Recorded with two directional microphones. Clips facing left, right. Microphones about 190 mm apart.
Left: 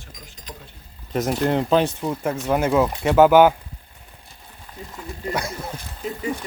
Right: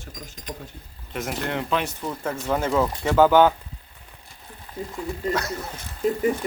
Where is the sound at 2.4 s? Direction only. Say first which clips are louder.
Left 3 dB; 10° left (ahead or behind).